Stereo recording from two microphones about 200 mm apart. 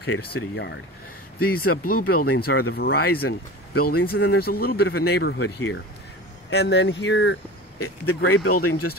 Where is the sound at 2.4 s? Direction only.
50° left (ahead or behind).